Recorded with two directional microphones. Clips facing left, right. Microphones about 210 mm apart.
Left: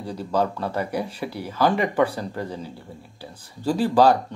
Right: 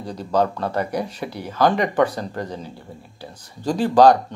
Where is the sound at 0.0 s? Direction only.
10° left (ahead or behind).